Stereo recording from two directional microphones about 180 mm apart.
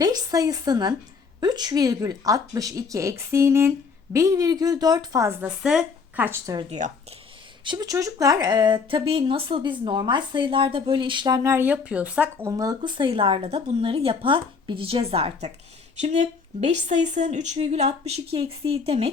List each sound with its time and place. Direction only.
0.0 s speech: 20° right (ahead or behind)
5.5 s speech: 5° right (ahead or behind)
6.7 s speech: 40° right (ahead or behind)
7.6 s speech: 25° right (ahead or behind); by 12.5 s 10° right (ahead or behind)
12.5 s a woman's voice: 20° right (ahead or behind)